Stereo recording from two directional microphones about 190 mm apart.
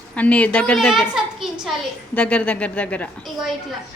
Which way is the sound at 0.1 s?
5° left (ahead or behind).